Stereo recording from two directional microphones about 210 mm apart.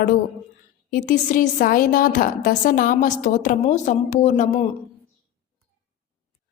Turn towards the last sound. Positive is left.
turn(degrees=35)  # may be behind; listen again after turning